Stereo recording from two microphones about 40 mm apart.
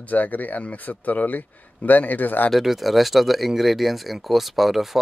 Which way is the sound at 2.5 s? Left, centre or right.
Centre.